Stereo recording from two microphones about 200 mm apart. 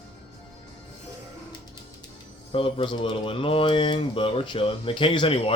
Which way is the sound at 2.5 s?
25° left (ahead or behind).